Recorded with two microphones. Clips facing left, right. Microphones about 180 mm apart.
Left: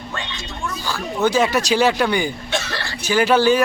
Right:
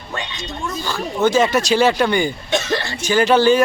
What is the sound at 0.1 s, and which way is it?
Speech, 15° right (ahead or behind).